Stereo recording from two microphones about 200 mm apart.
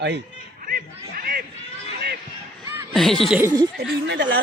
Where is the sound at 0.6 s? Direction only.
45° right (ahead or behind).